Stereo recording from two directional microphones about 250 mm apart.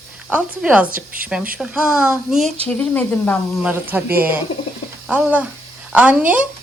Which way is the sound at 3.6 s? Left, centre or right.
Centre.